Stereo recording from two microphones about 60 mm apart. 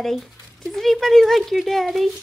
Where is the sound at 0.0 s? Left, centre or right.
Centre.